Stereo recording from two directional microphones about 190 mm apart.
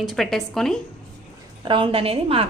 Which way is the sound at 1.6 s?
25° right (ahead or behind).